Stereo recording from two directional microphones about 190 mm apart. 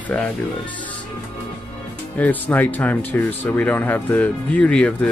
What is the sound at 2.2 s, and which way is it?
Speech, 10° left (ahead or behind).